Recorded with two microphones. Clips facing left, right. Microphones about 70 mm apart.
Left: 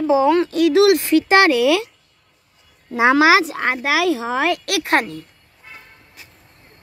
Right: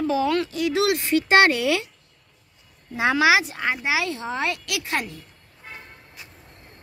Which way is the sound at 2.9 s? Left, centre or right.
Left.